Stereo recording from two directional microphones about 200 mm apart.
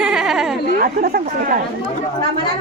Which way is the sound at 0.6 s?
45° right (ahead or behind).